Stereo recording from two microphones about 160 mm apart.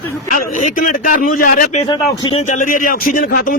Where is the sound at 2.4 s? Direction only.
50° left (ahead or behind).